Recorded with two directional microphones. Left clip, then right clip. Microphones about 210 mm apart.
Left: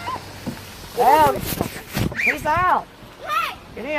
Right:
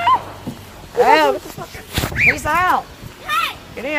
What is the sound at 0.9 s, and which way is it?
Speech, 20° right (ahead or behind).